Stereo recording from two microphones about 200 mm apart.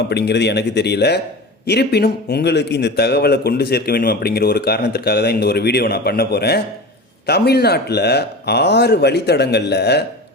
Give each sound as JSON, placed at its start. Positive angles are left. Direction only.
{"t": 0.1, "sound": "speech", "side_deg": 55}